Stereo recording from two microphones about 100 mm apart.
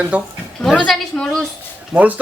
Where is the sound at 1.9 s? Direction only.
15° right (ahead or behind).